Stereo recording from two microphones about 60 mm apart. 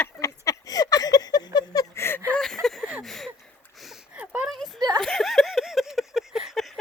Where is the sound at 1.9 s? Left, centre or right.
Left.